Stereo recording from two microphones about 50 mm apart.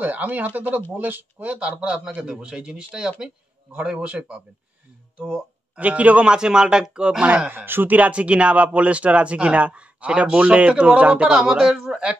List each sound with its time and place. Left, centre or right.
0.0 s speech: right
7.5 s speech: right
7.9 s speech: right